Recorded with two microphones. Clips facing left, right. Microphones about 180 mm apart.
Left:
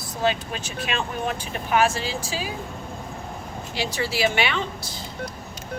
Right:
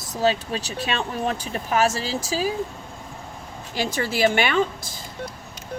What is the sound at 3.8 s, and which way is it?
Speech, 50° right (ahead or behind).